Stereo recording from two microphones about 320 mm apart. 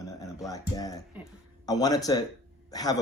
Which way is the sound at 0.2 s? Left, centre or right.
Centre.